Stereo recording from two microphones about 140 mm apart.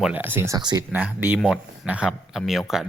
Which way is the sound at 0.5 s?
30° right (ahead or behind).